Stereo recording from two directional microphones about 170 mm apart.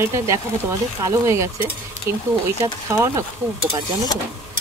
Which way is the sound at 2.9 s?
20° right (ahead or behind).